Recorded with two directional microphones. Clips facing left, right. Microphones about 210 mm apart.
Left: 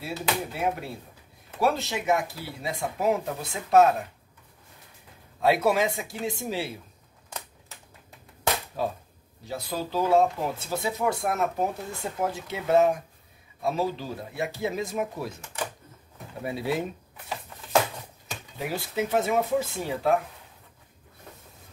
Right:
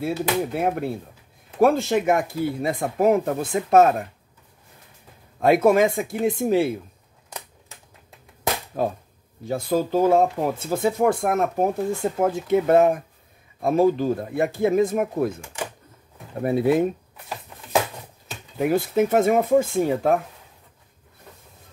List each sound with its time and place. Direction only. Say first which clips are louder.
0.0 s speech: right 7 dB; 50° right (ahead or behind)
5.4 s speech: right 6 dB; 50° right (ahead or behind)
8.8 s speech: right 5 dB; 50° right (ahead or behind)
15.4 s a sound: right 2 dB; 10° right (ahead or behind)
16.3 s speech: right 9 dB; 55° right (ahead or behind)
18.6 s speech: right 10 dB; 50° right (ahead or behind)